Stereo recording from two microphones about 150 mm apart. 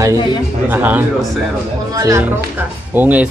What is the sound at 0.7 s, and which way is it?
Speech, 10° right (ahead or behind).